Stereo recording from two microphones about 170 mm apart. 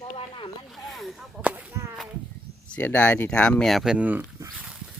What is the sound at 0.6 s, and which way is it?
Speech, centre (ahead or behind).